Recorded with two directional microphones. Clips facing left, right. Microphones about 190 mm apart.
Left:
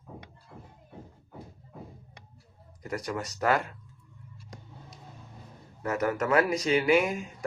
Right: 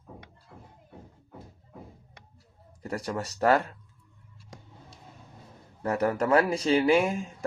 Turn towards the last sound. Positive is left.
turn(degrees=-30)  # may be behind; listen again after turning